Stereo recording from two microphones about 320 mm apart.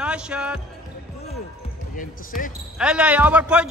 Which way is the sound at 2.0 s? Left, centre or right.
Left.